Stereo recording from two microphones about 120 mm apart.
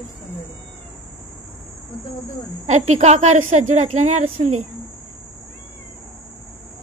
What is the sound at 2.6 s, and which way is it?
A woman's voice, 70° right (ahead or behind).